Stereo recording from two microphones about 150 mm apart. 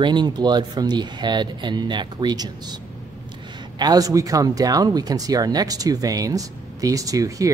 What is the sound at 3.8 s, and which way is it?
Speech, 25° right (ahead or behind).